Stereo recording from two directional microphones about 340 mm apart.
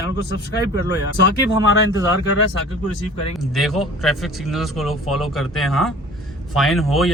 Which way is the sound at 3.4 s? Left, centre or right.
Centre.